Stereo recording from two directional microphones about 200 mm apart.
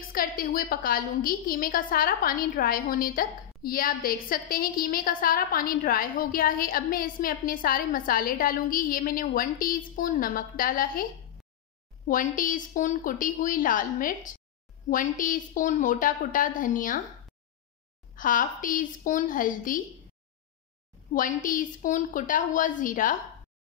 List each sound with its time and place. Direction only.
0.1 s a woman's voice: 45° left (ahead or behind)
12.1 s a woman's voice: 40° left (ahead or behind)
18.1 s a woman's voice: 40° left (ahead or behind)
21.1 s a woman's voice: 40° left (ahead or behind)